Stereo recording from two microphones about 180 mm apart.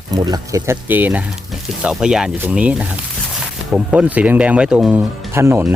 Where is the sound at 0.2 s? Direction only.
20° right (ahead or behind).